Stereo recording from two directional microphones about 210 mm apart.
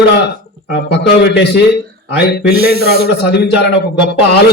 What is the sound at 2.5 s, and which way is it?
Speech, 50° right (ahead or behind).